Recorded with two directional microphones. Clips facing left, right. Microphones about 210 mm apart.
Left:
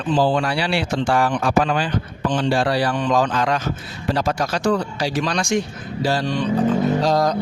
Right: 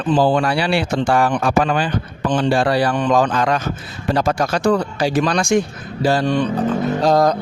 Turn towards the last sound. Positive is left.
turn(degrees=-55)  # may be behind; listen again after turning